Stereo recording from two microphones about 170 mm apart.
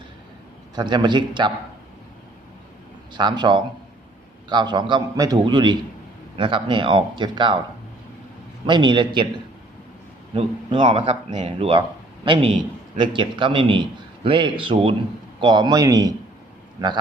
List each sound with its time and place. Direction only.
0.8 s a man's voice: 25° right (ahead or behind)
3.1 s a man's voice: 25° right (ahead or behind)
8.6 s a man's voice: 25° right (ahead or behind)
10.3 s a man's voice: 30° right (ahead or behind)